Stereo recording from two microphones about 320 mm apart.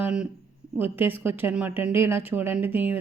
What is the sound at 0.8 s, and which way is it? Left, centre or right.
Speech, centre.